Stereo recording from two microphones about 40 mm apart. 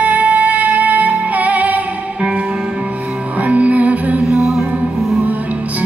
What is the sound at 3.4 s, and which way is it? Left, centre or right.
Music, right.